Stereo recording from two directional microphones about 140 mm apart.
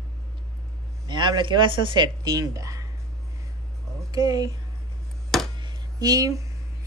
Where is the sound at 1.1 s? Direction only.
30° right (ahead or behind).